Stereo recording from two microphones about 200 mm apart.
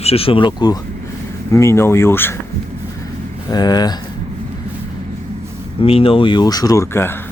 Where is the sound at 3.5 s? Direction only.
20° left (ahead or behind).